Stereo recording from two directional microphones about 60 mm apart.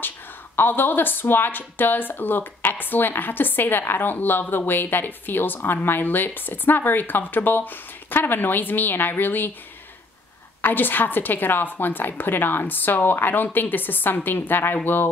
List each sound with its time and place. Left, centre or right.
0.6 s speech: left
10.6 s speech: left